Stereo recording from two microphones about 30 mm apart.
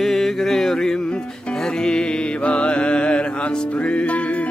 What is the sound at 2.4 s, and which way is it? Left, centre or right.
Music, left.